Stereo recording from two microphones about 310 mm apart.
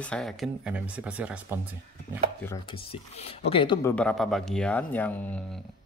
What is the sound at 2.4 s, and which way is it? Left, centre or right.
Speech, centre.